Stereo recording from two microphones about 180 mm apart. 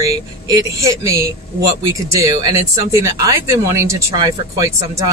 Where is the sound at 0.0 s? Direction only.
20° right (ahead or behind).